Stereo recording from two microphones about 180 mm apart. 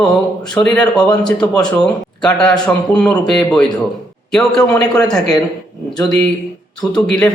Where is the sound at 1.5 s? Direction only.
5° left (ahead or behind).